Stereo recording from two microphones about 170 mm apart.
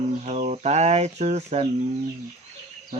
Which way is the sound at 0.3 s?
40° right (ahead or behind).